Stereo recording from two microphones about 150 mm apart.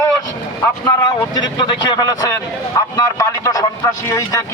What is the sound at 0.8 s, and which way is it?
Speech, 25° left (ahead or behind).